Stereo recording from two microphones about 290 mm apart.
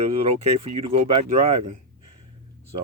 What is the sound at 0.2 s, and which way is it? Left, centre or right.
Speech, right.